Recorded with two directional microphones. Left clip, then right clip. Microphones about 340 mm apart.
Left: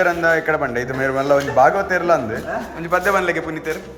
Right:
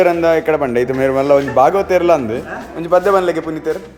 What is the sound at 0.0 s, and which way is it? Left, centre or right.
A man's voice, centre.